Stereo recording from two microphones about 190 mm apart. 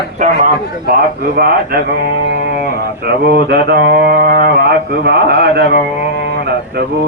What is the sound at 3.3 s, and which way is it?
Speech, 60° right (ahead or behind).